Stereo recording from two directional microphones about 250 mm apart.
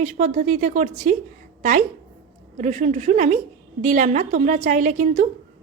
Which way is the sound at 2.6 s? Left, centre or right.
Right.